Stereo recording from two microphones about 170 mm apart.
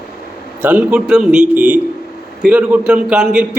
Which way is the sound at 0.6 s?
5° right (ahead or behind).